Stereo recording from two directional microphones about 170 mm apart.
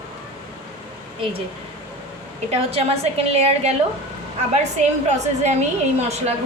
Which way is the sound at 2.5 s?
35° right (ahead or behind).